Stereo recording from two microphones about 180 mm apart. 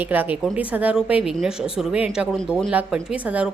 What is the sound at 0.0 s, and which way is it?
A woman's voice, 10° right (ahead or behind).